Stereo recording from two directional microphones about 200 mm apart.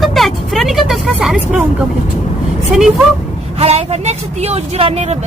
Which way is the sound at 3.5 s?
30° right (ahead or behind).